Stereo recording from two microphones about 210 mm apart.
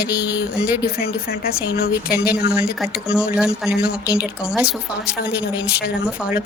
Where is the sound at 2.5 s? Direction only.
5° right (ahead or behind).